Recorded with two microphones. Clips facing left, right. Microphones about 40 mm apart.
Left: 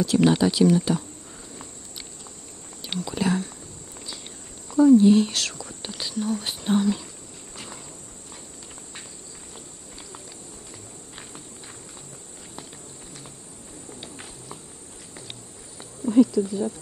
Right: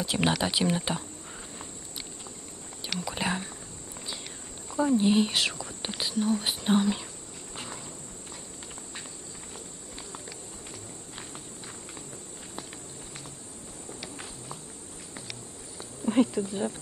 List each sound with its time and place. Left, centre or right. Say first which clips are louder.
0.0 s speech: left 8 dB; right
2.8 s whispering: left 5 dB; right
4.6 s speech: left 9 dB; right
14.1 s clip-clop: left 1 dB; centre
16.1 s speech: left 6 dB; right